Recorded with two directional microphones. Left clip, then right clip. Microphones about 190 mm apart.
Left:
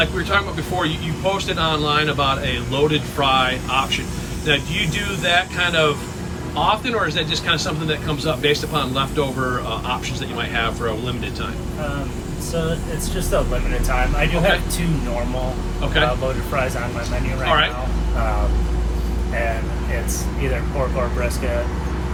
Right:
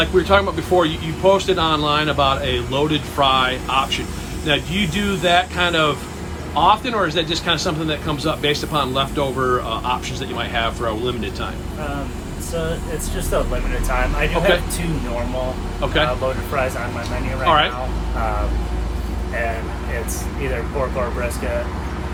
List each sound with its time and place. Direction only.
0.0 s speech: 15° right (ahead or behind)
13.3 s speech: 5° right (ahead or behind)
15.8 s speech: 15° right (ahead or behind)
17.4 s speech: 15° right (ahead or behind)